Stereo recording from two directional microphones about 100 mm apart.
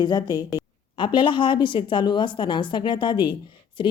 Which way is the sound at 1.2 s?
55° left (ahead or behind).